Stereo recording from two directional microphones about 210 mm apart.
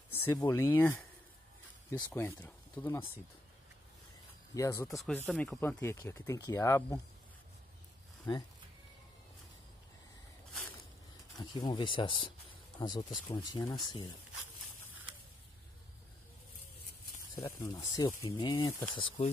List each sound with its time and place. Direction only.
0.1 s speech: 10° left (ahead or behind)
4.6 s speech: 15° left (ahead or behind)
4.8 s speech: centre (ahead or behind)
8.3 s speech: 20° left (ahead or behind)
11.3 s speech: 20° left (ahead or behind)
17.4 s speech: 15° left (ahead or behind)